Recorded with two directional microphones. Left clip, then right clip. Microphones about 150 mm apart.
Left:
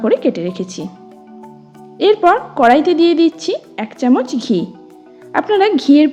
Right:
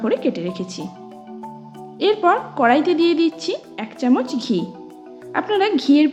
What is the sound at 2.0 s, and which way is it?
A woman's voice, 30° left (ahead or behind).